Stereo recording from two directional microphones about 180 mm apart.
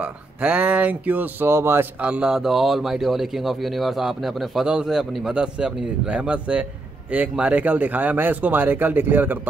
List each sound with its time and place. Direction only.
0.0 s speech: 5° right (ahead or behind)